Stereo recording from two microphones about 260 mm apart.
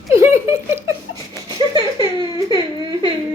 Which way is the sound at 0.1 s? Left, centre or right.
Centre.